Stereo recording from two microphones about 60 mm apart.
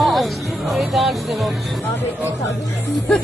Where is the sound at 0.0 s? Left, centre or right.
Centre.